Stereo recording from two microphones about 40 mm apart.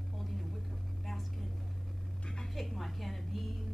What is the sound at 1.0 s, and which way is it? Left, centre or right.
Speech, centre.